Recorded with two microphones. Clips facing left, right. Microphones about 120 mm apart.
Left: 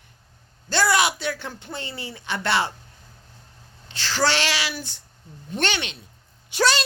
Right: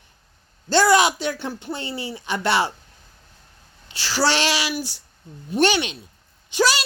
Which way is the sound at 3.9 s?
10° right (ahead or behind).